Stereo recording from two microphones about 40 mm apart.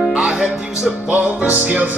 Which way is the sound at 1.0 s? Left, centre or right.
Right.